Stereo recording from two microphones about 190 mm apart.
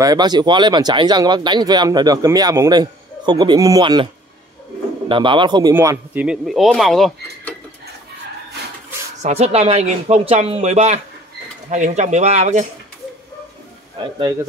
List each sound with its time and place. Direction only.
0.0 s a man's voice: 20° right (ahead or behind); by 7.5 s centre (ahead or behind)
9.2 s speech: 35° right (ahead or behind)
13.9 s speech: 25° right (ahead or behind)